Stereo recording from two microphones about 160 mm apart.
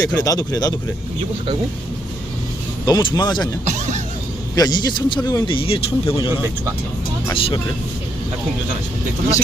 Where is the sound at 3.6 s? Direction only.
45° right (ahead or behind).